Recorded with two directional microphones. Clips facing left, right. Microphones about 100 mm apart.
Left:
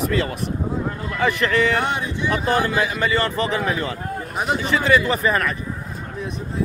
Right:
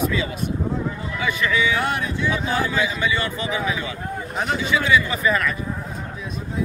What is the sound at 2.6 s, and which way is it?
Speech, 55° left (ahead or behind).